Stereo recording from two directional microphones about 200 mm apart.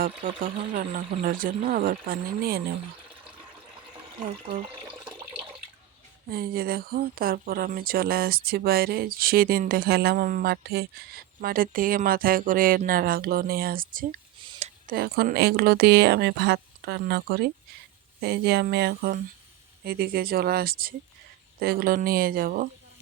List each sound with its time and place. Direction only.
0.2 s speech: 40° right (ahead or behind)
6.3 s speech: 50° right (ahead or behind)
14.4 s a sound: 25° right (ahead or behind)
14.8 s speech: 50° right (ahead or behind)